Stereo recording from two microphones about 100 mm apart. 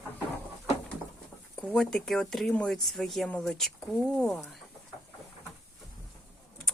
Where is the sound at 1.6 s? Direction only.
10° left (ahead or behind).